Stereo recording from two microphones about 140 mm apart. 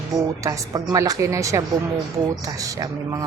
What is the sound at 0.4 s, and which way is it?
Speech, 25° right (ahead or behind).